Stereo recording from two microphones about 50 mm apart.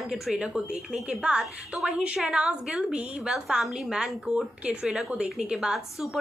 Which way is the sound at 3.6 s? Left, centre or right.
Centre.